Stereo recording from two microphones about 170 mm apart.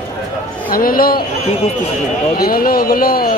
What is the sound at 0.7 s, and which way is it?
Speech, 60° left (ahead or behind).